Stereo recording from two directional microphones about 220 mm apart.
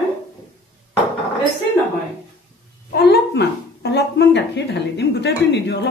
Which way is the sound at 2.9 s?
45° left (ahead or behind).